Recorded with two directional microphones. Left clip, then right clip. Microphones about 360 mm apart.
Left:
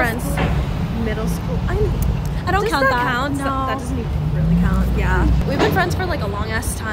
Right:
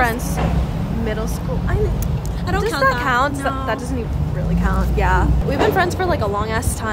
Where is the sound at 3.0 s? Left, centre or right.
Centre.